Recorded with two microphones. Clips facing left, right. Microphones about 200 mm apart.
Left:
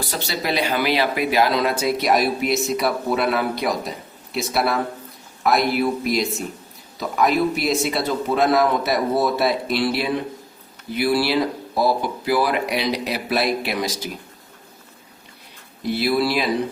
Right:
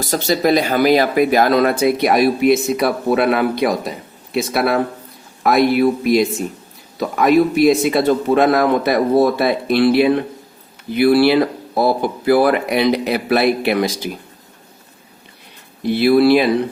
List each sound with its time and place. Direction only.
0.0 s speech: 45° right (ahead or behind); by 13.9 s 60° right (ahead or behind)
16.0 s speech: 55° right (ahead or behind)